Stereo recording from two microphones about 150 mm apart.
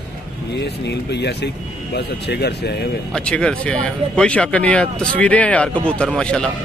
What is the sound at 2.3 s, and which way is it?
Speech, 90° left.